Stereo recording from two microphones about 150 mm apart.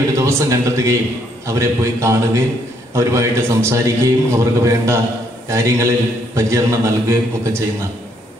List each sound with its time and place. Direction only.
0.1 s a man's voice: 20° right (ahead or behind)